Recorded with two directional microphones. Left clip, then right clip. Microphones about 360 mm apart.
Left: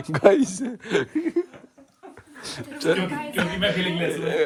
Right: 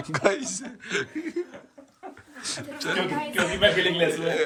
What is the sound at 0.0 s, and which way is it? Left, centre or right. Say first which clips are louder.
A man's voice: left 7 dB; centre.